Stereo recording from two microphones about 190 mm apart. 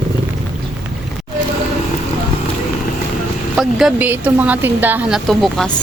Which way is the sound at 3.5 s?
5° right (ahead or behind).